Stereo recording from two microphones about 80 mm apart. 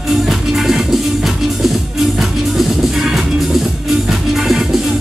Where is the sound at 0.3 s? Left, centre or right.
Centre.